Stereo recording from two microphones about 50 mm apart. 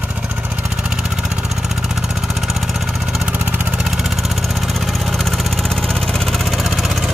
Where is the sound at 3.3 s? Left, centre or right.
Right.